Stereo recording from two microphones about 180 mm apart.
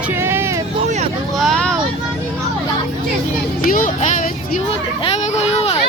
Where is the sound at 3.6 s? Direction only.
45° left (ahead or behind).